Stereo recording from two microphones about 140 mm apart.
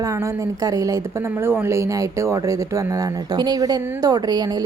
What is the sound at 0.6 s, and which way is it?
Speech, 25° right (ahead or behind).